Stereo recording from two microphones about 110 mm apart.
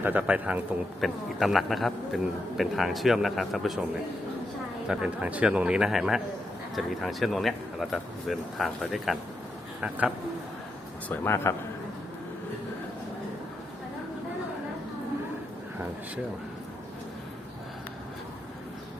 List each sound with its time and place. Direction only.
0.0 s a man's voice: 15° right (ahead or behind)
1.0 s a man's voice: centre (ahead or behind)
4.9 s a man's voice: 10° right (ahead or behind)
11.1 s speech: 20° left (ahead or behind)